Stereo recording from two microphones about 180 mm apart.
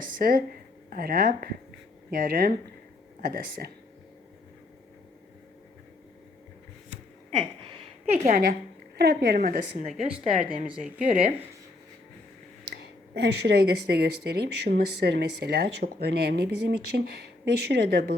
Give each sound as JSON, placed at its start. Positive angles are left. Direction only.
{"t": 0.0, "sound": "a sound", "side_deg": -50}
{"t": 0.9, "sound": "a woman's voice", "side_deg": -55}
{"t": 8.0, "sound": "a woman's voice", "side_deg": -40}
{"t": 9.0, "sound": "speech", "side_deg": -60}
{"t": 10.1, "sound": "speech", "side_deg": -5}
{"t": 12.7, "sound": "speech", "side_deg": -65}